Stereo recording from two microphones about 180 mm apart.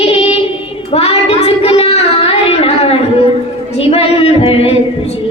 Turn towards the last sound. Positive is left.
turn(degrees=35)  # may be behind; listen again after turning